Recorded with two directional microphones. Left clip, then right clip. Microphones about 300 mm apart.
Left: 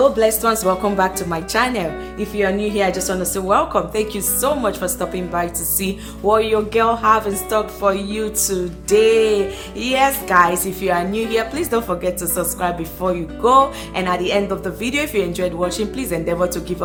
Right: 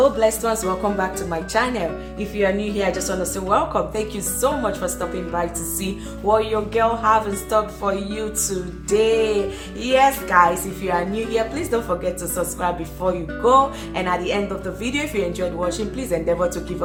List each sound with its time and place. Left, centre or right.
0.2 s speech: left